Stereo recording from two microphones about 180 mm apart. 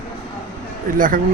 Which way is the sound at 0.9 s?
50° right (ahead or behind).